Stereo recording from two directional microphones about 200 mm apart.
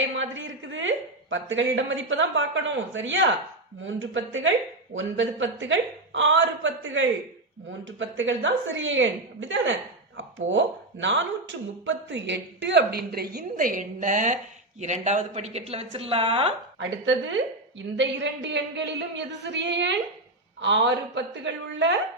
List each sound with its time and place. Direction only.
0.2 s a woman's voice: 70° right (ahead or behind); by 16.6 s 30° right (ahead or behind)
17.1 s speech: 70° right (ahead or behind)